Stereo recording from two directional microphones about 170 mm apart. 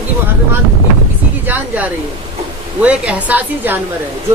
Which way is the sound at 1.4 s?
10° right (ahead or behind).